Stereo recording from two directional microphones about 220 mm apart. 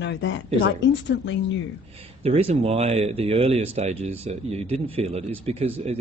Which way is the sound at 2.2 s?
25° right (ahead or behind).